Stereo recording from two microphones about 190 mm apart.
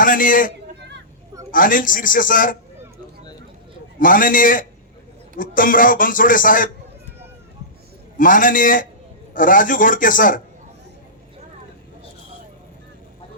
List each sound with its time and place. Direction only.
0.0 s a man's voice: 45° left (ahead or behind)
4.0 s a man's voice: 45° left (ahead or behind)
8.2 s a man's voice: 45° left (ahead or behind)